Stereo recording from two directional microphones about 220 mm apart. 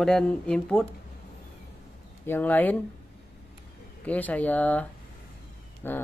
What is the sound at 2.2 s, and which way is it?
Speech, 10° left (ahead or behind).